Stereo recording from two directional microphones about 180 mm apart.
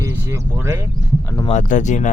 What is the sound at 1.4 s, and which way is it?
Speech, 40° left (ahead or behind).